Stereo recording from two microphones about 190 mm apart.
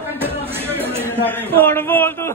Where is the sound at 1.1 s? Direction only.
10° left (ahead or behind).